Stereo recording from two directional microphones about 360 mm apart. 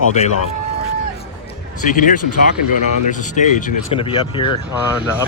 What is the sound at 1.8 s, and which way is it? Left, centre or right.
Speech, left.